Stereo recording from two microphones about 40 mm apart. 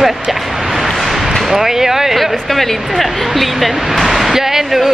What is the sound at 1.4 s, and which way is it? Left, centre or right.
Speech, centre.